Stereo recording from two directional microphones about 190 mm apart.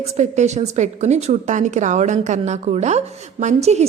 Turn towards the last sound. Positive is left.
turn(degrees=-35)  # may be behind; listen again after turning